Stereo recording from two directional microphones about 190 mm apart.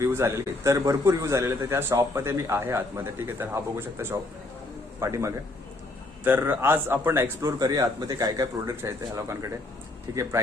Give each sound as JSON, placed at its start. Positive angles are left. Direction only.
{"t": 0.0, "sound": "a man's voice", "side_deg": -15}